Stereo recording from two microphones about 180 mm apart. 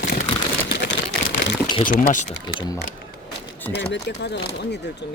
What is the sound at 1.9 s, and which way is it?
Speech, 50° left (ahead or behind).